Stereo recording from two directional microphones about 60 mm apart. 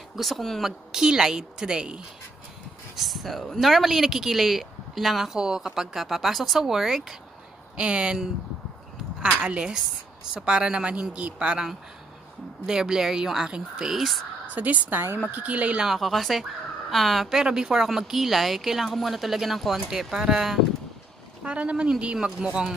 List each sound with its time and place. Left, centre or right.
0.1 s a woman's voice: centre
3.0 s speech: centre
7.7 s a woman's voice: centre
14.5 s a woman's voice: right
15.8 s speech: centre
17.4 s speech: centre
21.5 s a woman's voice: centre